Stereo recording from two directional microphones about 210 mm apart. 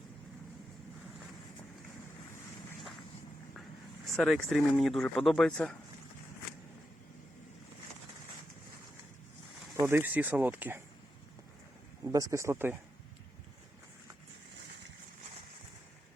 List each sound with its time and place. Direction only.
4.0 s speech: centre (ahead or behind)
9.7 s speech: 10° right (ahead or behind)
12.0 s speech: 15° right (ahead or behind)